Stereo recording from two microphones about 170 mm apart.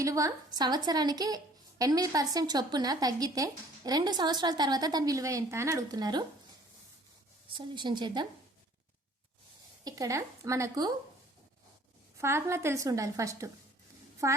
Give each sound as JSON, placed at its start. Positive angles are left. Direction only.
{"t": 0.0, "sound": "a woman's voice", "side_deg": -20}
{"t": 7.5, "sound": "a woman's voice", "side_deg": -25}
{"t": 9.8, "sound": "a woman's voice", "side_deg": -20}
{"t": 12.1, "sound": "a woman's voice", "side_deg": -15}